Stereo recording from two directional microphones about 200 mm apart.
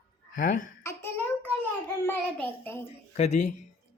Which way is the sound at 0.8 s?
10° left (ahead or behind).